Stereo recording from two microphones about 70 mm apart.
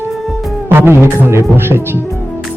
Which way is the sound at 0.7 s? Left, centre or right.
Right.